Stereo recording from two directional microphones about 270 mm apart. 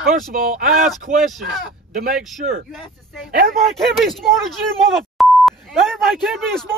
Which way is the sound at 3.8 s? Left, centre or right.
Centre.